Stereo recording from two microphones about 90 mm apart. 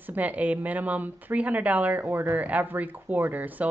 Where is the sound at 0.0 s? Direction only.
20° right (ahead or behind).